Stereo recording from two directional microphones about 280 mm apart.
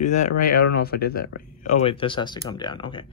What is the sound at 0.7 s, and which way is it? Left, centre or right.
Speech, left.